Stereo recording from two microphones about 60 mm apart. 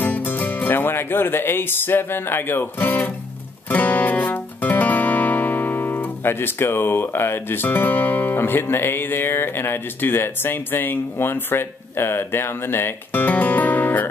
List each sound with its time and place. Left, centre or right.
0.0 s music: left